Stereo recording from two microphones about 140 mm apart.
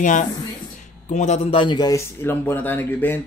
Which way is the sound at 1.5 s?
35° left (ahead or behind).